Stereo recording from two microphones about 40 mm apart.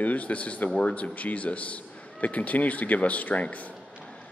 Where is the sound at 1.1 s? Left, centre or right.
Left.